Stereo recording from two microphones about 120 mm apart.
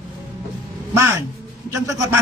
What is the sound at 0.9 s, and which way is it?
A man's voice, 25° right (ahead or behind).